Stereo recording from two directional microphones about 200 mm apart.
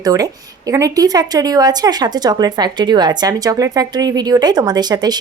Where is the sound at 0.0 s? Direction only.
20° right (ahead or behind).